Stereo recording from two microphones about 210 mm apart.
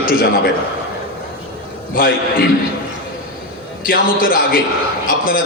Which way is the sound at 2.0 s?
40° left (ahead or behind).